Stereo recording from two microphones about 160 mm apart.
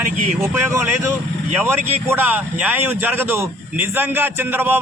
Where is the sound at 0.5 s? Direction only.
15° right (ahead or behind).